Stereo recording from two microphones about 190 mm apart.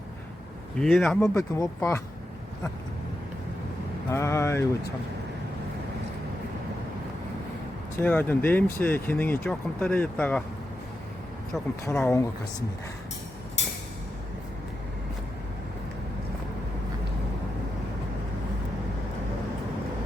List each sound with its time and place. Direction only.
0.8 s speech: 5° left (ahead or behind)
1.2 s speech: 15° left (ahead or behind)
4.1 s speech: 15° left (ahead or behind)
7.9 s speech: 10° left (ahead or behind)
11.9 s speech: 15° left (ahead or behind)